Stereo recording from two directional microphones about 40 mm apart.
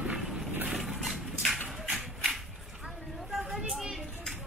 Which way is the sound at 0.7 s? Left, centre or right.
Centre.